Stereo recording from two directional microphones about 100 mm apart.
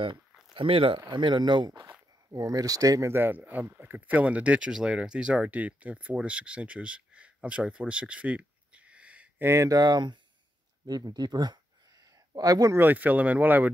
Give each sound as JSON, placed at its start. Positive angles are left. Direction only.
{"t": 0.6, "sound": "speech", "side_deg": -65}
{"t": 1.1, "sound": "speech", "side_deg": -50}
{"t": 2.3, "sound": "speech", "side_deg": -35}
{"t": 3.1, "sound": "speech", "side_deg": -20}
{"t": 9.5, "sound": "speech", "side_deg": -30}
{"t": 12.7, "sound": "speech", "side_deg": -20}